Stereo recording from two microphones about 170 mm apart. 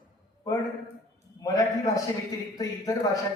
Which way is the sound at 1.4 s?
20° left (ahead or behind).